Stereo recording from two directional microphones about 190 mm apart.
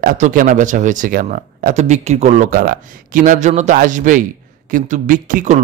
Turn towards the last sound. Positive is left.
turn(degrees=-40)  # may be behind; listen again after turning